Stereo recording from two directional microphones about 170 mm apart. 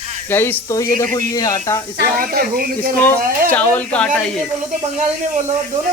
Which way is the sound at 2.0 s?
60° right (ahead or behind).